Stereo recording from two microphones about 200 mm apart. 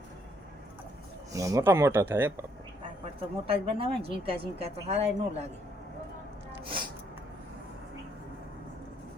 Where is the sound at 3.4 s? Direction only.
30° right (ahead or behind).